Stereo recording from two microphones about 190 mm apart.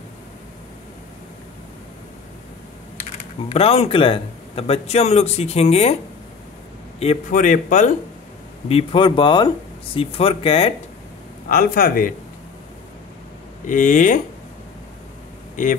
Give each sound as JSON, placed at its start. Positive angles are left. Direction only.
{"t": 3.0, "sound": "speech", "side_deg": 30}
{"t": 7.0, "sound": "speech", "side_deg": 40}
{"t": 8.6, "sound": "speech", "side_deg": 30}
{"t": 11.5, "sound": "a man's voice", "side_deg": 50}
{"t": 13.7, "sound": "a man's voice", "side_deg": 45}